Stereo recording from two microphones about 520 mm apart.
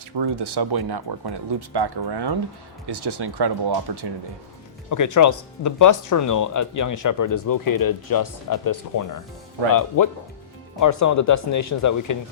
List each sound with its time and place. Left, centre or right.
0.2 s speech: right
4.9 s speech: left